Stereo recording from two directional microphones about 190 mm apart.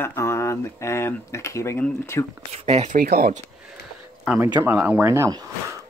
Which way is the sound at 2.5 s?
35° right (ahead or behind).